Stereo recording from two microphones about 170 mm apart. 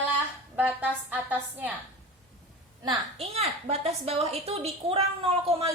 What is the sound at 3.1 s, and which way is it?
A woman's voice, 35° right (ahead or behind).